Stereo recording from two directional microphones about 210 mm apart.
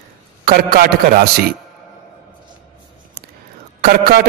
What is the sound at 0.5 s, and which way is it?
Speech, 45° right (ahead or behind).